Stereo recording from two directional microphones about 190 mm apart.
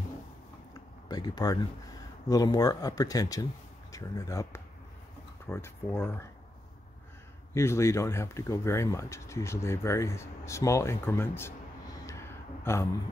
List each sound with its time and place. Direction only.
1.0 s speech: 20° left (ahead or behind)
7.5 s speech: 15° left (ahead or behind)
12.1 s gasp: 15° left (ahead or behind)